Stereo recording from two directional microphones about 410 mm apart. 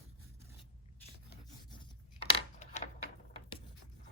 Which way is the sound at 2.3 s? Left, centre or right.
Centre.